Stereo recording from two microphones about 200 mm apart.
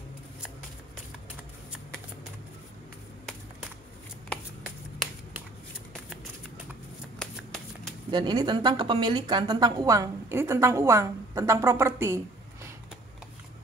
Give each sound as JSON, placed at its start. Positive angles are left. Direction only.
{"t": 7.2, "sound": "shuffling cards", "side_deg": 5}
{"t": 8.1, "sound": "a woman's voice", "side_deg": -20}